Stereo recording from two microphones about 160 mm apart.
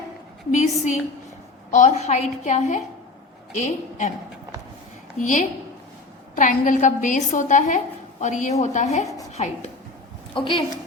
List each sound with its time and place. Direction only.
0.5 s a woman's voice: 50° left (ahead or behind)
5.2 s a woman's voice: 50° left (ahead or behind)
10.3 s a woman's voice: 30° left (ahead or behind)